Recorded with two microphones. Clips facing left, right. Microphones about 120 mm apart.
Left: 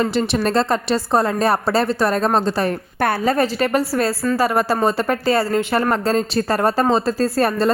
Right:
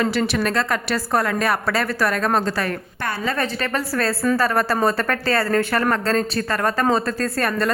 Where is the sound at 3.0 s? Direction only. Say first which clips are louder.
Left 8 dB; 50° left (ahead or behind).